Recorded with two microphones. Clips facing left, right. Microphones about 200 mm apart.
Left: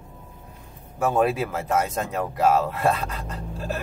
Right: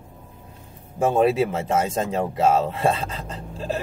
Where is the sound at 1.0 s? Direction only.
30° right (ahead or behind).